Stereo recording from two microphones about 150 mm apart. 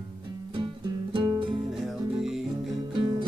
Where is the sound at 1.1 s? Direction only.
35° right (ahead or behind).